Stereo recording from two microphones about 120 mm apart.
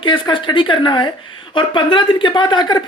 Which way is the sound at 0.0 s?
45° left (ahead or behind).